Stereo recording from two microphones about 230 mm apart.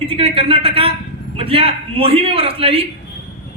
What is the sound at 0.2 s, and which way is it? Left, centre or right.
A man's voice, right.